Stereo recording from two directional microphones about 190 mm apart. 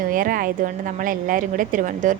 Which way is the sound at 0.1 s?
45° right (ahead or behind).